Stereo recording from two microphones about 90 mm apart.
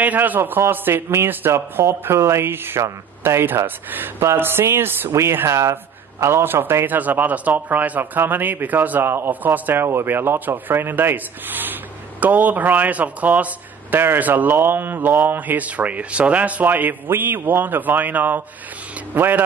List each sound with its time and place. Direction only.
0.0 s a man's voice: 20° right (ahead or behind)